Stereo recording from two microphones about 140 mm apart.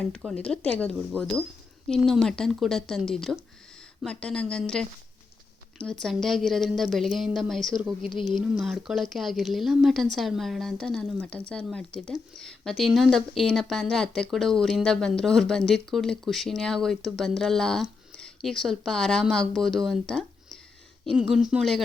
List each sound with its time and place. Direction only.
0.3 s speech: 5° left (ahead or behind)